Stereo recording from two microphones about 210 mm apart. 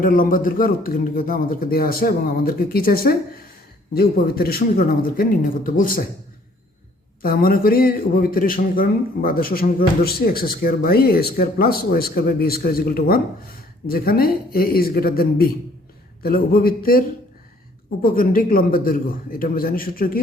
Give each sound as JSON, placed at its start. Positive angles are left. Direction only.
{"t": 0.0, "sound": "a man's voice", "side_deg": 40}
{"t": 7.2, "sound": "a man's voice", "side_deg": 45}
{"t": 18.0, "sound": "a man's voice", "side_deg": 40}